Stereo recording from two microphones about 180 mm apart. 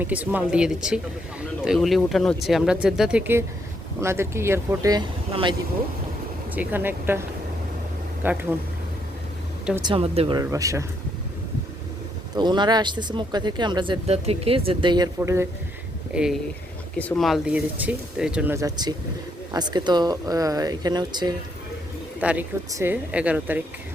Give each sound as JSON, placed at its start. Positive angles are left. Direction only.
{"t": 0.0, "sound": "speech", "side_deg": -10}
{"t": 6.5, "sound": "speech", "side_deg": -10}
{"t": 9.8, "sound": "speech", "side_deg": -30}
{"t": 10.4, "sound": "speech", "side_deg": -20}
{"t": 12.3, "sound": "speech", "side_deg": -25}
{"t": 16.1, "sound": "speech", "side_deg": -5}
{"t": 18.5, "sound": "speech", "side_deg": -20}
{"t": 22.2, "sound": "speech", "side_deg": -5}